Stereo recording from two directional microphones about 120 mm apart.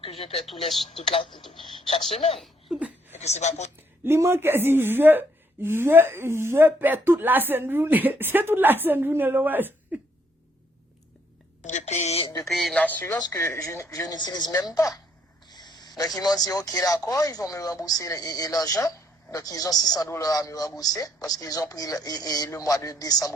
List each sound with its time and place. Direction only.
0.0 s speech: 55° left (ahead or behind)
0.4 s speech: centre (ahead or behind)
0.9 s speech: 55° left (ahead or behind)
1.4 s speech: centre (ahead or behind)
3.1 s speech: 70° left (ahead or behind)
4.0 s a woman's voice: 20° right (ahead or behind)
11.6 s a sound: 85° left; by 12.3 s 60° left (ahead or behind)
12.5 s speech: centre (ahead or behind)
12.8 s speech: 15° left (ahead or behind)
13.1 s a woman's voice: 30° left (ahead or behind)
15.4 s a sound: 35° left (ahead or behind)
16.1 s speech: 30° left (ahead or behind)